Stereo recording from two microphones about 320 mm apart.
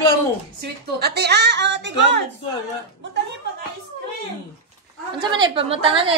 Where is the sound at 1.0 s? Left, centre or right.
Right.